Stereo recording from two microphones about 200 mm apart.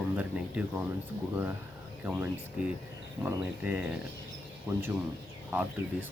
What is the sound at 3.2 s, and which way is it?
Speech, 5° right (ahead or behind).